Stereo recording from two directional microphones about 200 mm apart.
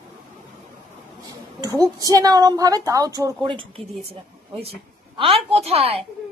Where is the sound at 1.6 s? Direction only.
15° right (ahead or behind).